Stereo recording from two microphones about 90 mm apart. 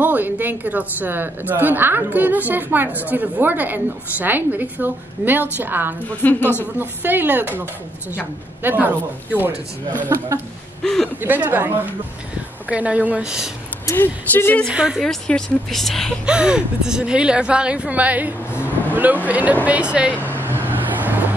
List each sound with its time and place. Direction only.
0.0 s a woman's voice: 20° right (ahead or behind)
6.2 s speech: 20° left (ahead or behind)
6.8 s a woman's voice: 20° right (ahead or behind)
8.6 s a woman's voice: 20° right (ahead or behind)
10.8 s speech: 5° left (ahead or behind)
11.1 s a woman's voice: 20° right (ahead or behind)
13.9 s speech: 20° left (ahead or behind)
14.7 s speech: 10° right (ahead or behind)
15.0 s a woman's voice: 5° left (ahead or behind)
16.3 s speech: 10° right (ahead or behind)
18.5 s vehicle: 25° left (ahead or behind)
18.9 s speech: 20° right (ahead or behind)
20.2 s vehicle: 20° right (ahead or behind)